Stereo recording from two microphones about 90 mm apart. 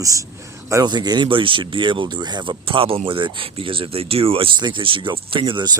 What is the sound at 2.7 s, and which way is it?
Speech, 90° right.